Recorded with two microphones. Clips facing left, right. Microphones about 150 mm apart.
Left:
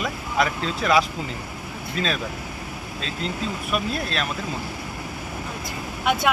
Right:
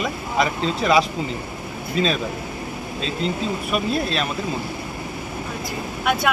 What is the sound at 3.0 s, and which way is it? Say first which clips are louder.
Speech: right 4 dB; centre (ahead or behind).